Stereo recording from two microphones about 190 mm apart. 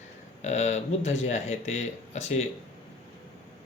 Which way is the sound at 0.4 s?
35° left (ahead or behind).